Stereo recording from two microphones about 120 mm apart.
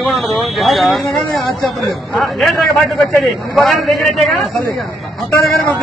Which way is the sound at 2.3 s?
Centre (ahead or behind).